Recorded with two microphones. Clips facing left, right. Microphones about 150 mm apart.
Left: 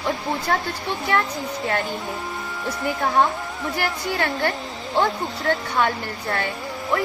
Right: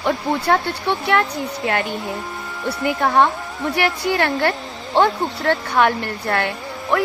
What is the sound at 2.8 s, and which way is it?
Speech, 80° right.